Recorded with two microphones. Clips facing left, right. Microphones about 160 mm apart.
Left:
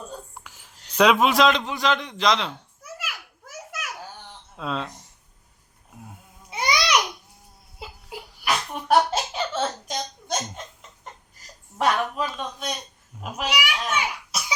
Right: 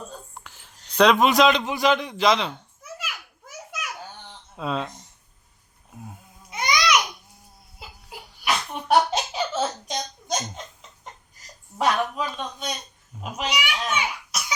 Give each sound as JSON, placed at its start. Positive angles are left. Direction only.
{"t": 0.4, "sound": "a man's voice", "side_deg": 10}
{"t": 2.8, "sound": "a sound", "side_deg": 5}
{"t": 4.5, "sound": "speech", "side_deg": -5}
{"t": 6.5, "sound": "babbling", "side_deg": 30}
{"t": 8.4, "sound": "a sound", "side_deg": 5}
{"t": 11.8, "sound": "speech", "side_deg": 0}